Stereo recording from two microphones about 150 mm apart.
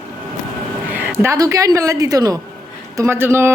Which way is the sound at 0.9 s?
15° right (ahead or behind).